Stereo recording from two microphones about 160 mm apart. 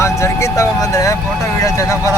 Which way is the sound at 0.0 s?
20° left (ahead or behind).